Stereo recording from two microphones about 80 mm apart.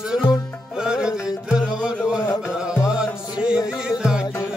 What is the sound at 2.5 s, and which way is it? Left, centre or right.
Music, centre.